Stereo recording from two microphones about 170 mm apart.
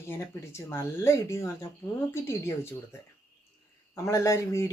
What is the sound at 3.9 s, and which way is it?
Speech, 15° left (ahead or behind).